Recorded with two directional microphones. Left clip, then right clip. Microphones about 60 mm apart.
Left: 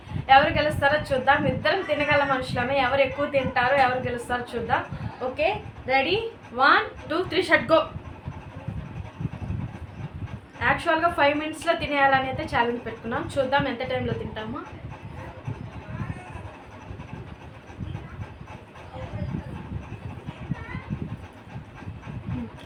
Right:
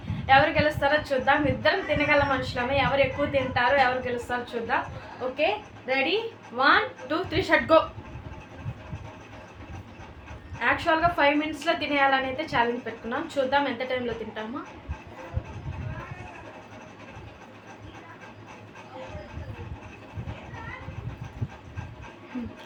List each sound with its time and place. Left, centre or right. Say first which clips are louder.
0.3 s a woman's voice: left 2 dB; left
10.6 s a woman's voice: left 1 dB; left